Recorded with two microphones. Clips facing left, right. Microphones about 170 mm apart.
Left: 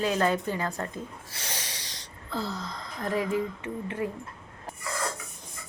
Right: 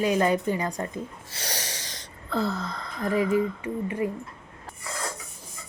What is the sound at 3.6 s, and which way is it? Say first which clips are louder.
Speech: right 4 dB; 5° right (ahead or behind).